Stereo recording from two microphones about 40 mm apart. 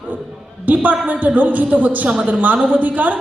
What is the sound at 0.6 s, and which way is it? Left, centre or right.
A woman's voice, right.